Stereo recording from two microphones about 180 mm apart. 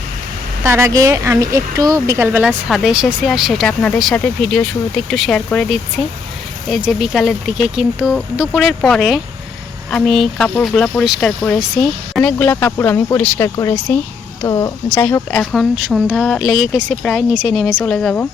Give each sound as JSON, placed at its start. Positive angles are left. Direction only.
{"t": 0.6, "sound": "speech", "side_deg": -15}
{"t": 2.5, "sound": "a woman's voice", "side_deg": 0}
{"t": 15.7, "sound": "speech", "side_deg": -5}